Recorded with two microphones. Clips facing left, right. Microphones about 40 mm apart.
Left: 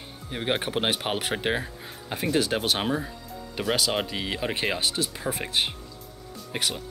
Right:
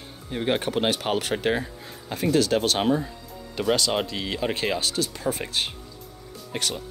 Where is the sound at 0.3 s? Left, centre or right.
Centre.